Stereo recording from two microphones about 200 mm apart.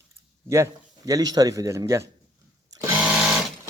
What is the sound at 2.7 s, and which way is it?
Sewing machine, 15° right (ahead or behind).